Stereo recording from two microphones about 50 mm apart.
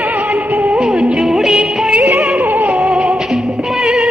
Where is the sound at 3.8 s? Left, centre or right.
Centre.